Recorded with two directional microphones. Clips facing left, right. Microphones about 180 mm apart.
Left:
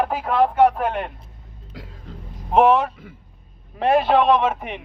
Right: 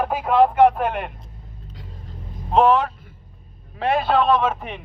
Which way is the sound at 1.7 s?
90° left.